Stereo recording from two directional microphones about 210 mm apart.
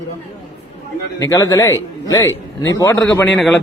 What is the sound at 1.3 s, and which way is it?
A man's voice, 15° left (ahead or behind).